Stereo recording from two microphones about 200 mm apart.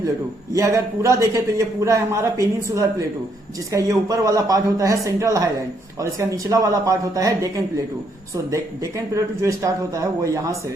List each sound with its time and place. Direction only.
0.5 s a man's voice: 15° right (ahead or behind)